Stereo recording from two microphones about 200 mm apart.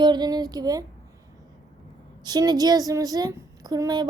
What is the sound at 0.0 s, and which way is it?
Speech, 20° right (ahead or behind).